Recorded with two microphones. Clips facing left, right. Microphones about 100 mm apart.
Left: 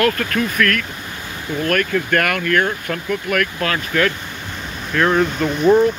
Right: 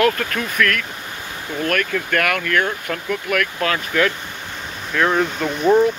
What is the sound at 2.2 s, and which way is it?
Speech, centre (ahead or behind).